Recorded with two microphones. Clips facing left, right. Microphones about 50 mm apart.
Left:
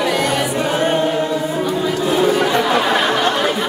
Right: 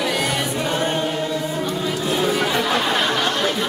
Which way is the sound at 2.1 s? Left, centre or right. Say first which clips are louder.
Left 5 dB; centre.